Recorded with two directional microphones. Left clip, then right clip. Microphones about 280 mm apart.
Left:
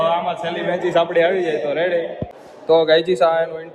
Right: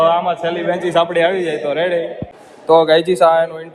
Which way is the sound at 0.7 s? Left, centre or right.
Right.